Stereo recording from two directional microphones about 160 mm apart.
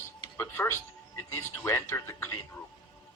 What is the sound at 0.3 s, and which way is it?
Speech, 15° left (ahead or behind).